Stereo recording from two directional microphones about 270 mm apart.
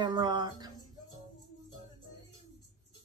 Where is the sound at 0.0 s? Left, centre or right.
Centre.